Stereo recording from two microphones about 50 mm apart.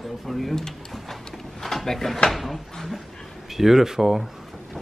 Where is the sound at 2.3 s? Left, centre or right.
Centre.